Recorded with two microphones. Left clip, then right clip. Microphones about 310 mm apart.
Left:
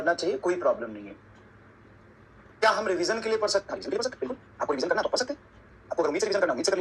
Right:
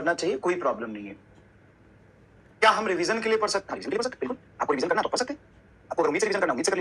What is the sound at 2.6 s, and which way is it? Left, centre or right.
A man's voice, right.